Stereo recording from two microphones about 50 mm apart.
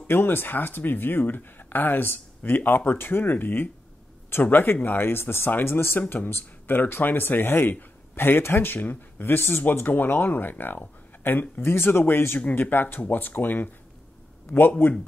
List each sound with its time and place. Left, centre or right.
0.0 s speech: left
12.4 s speech: left